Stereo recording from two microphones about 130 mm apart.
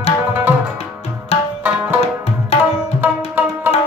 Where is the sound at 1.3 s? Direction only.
50° left (ahead or behind).